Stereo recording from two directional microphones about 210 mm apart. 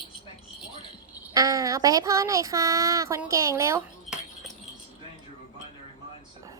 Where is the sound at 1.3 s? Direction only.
15° right (ahead or behind).